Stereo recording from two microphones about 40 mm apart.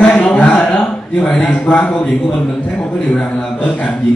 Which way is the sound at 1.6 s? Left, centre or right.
Left.